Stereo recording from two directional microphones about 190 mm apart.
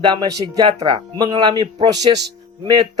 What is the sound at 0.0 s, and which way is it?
Speech, 25° right (ahead or behind).